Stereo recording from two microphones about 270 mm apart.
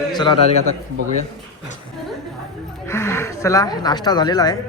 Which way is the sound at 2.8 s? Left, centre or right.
Centre.